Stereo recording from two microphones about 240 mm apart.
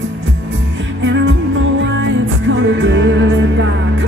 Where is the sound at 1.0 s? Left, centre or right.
Right.